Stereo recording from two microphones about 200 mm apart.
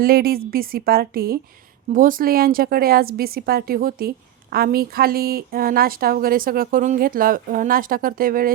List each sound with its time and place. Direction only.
0.0 s a woman's voice: 50° right (ahead or behind)